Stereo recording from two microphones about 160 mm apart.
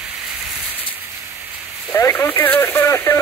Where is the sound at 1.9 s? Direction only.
15° left (ahead or behind).